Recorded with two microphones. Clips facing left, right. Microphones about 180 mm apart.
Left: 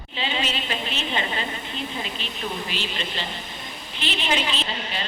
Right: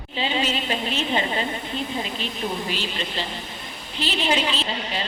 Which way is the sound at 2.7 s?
40° right (ahead or behind).